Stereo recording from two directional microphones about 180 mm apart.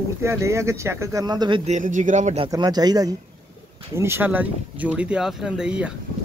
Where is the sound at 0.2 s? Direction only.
15° right (ahead or behind).